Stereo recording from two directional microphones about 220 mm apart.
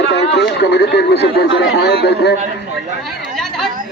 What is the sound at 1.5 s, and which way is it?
Speech, 50° left (ahead or behind).